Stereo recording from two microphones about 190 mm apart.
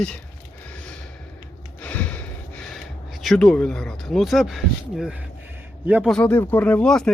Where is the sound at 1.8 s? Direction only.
10° left (ahead or behind).